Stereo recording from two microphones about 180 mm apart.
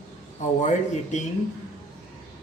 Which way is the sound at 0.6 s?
40° left (ahead or behind).